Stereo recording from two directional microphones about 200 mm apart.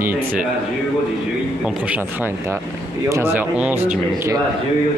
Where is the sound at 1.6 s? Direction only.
5° right (ahead or behind).